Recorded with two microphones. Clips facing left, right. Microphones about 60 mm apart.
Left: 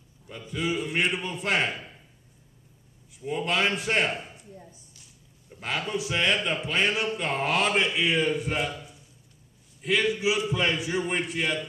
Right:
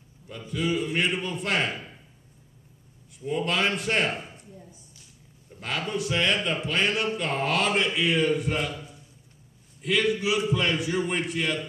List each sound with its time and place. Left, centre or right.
0.5 s a man's voice: centre
1.1 s a man's voice: centre
3.1 s a man's voice: centre
4.1 s a sound: centre
5.6 s a man's voice: centre
9.8 s a man's voice: centre